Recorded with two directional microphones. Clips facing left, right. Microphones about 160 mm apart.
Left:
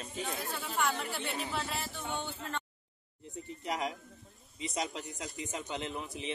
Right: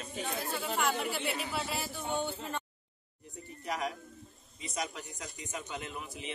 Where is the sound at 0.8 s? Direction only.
5° right (ahead or behind).